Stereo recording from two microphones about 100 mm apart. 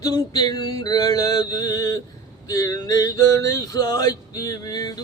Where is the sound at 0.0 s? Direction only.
45° left (ahead or behind).